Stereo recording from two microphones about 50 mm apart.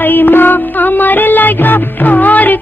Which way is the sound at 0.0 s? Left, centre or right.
Left.